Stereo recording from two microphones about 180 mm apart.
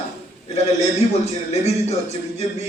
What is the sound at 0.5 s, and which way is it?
Speech, 35° left (ahead or behind).